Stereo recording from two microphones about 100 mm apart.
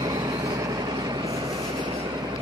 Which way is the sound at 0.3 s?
35° right (ahead or behind).